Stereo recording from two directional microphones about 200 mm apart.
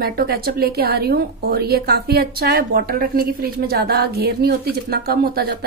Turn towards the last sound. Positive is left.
turn(degrees=-50)  # may be behind; listen again after turning